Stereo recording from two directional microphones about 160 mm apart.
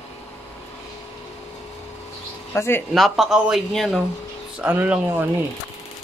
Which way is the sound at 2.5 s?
15° left (ahead or behind).